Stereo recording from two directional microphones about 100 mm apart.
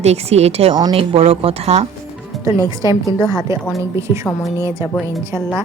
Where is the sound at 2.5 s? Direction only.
30° right (ahead or behind).